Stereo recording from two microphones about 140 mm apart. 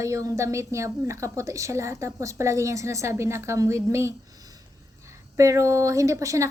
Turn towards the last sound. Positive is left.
turn(degrees=-20)  # may be behind; listen again after turning